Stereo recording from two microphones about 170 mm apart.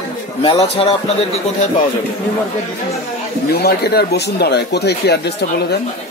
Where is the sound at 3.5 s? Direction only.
70° left (ahead or behind).